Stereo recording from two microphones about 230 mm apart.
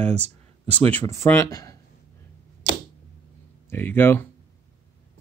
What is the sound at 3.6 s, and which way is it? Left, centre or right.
Speech, centre.